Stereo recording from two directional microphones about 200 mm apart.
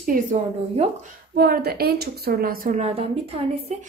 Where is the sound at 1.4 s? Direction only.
50° right (ahead or behind); by 3.4 s 30° right (ahead or behind).